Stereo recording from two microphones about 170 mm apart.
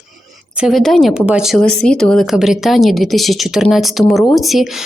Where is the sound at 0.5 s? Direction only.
Centre (ahead or behind).